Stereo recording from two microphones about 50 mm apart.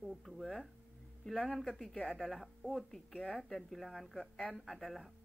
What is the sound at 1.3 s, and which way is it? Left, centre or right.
Speech, left.